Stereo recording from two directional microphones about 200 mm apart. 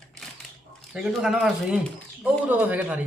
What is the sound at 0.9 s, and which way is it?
Speech, 5° right (ahead or behind).